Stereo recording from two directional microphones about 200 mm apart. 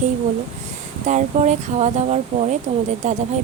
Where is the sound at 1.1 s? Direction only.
35° right (ahead or behind).